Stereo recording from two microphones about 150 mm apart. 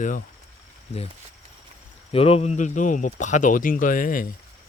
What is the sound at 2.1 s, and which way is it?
Speech, 40° left (ahead or behind).